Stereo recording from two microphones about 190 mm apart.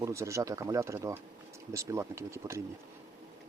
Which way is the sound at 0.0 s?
15° right (ahead or behind).